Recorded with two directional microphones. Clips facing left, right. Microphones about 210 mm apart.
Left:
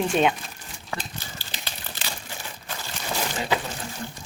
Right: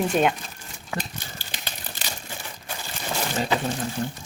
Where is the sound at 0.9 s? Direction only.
15° right (ahead or behind).